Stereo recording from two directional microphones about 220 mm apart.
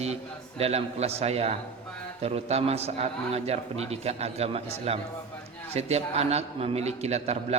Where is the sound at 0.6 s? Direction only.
30° right (ahead or behind).